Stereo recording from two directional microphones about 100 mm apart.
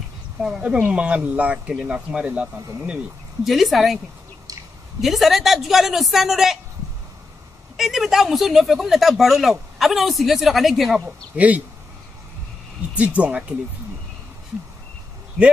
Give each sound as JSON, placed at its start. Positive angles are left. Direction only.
{"t": 0.4, "sound": "speech", "side_deg": -10}
{"t": 3.4, "sound": "speech", "side_deg": 0}
{"t": 5.0, "sound": "speech", "side_deg": 0}
{"t": 7.7, "sound": "speech", "side_deg": -5}
{"t": 11.3, "sound": "speech", "side_deg": -15}
{"t": 12.9, "sound": "speech", "side_deg": -15}